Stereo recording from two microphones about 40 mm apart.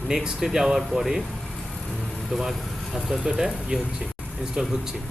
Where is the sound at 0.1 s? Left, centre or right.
Centre.